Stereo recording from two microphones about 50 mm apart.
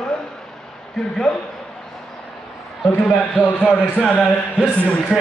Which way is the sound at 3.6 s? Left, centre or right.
Centre.